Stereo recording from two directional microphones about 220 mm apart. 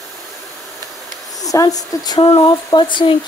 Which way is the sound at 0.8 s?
15° right (ahead or behind).